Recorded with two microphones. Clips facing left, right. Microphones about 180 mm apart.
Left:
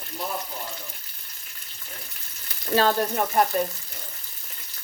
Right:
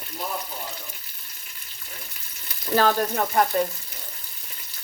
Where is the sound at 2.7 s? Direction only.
25° left (ahead or behind).